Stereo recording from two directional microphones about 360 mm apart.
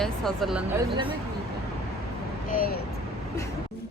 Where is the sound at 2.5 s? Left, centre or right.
Left.